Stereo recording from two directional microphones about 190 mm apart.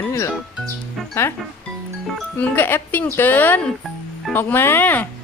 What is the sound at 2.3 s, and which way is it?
Speech, 10° left (ahead or behind).